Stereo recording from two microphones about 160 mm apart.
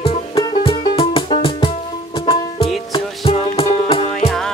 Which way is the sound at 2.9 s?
35° left (ahead or behind).